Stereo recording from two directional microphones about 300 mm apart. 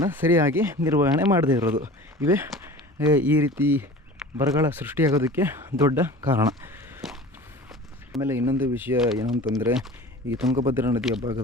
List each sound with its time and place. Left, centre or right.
0.1 s speech: centre
10.8 s speech: centre